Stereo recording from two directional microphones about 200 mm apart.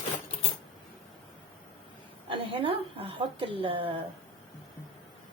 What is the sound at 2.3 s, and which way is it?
A woman's voice, 25° right (ahead or behind).